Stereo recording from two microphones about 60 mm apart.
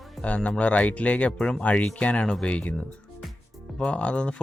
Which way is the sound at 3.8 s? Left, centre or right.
Centre.